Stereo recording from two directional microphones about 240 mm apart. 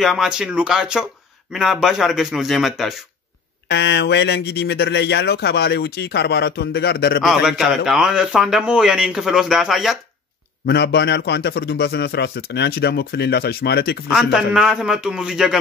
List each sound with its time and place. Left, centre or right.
0.0 s a man's voice: centre
3.6 s speech: left
7.2 s a man's voice: centre
10.7 s speech: left
14.0 s a man's voice: centre